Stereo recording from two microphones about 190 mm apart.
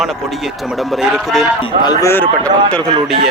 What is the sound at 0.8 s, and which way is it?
Speech, centre (ahead or behind).